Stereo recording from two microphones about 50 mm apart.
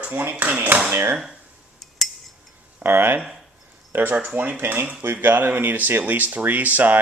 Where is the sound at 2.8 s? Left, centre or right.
Right.